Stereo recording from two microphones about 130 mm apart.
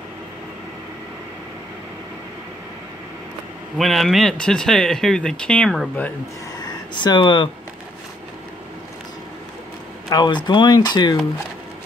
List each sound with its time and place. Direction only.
3.7 s speech: centre (ahead or behind)
6.6 s a sound: 35° left (ahead or behind)
10.0 s speech: 30° left (ahead or behind)